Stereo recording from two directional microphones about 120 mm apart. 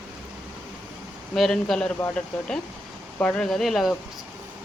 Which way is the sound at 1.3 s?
Centre (ahead or behind).